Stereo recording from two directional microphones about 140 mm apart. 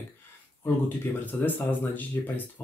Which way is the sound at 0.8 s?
10° left (ahead or behind).